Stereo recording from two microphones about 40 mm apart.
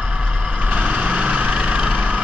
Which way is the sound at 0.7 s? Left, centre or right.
Right.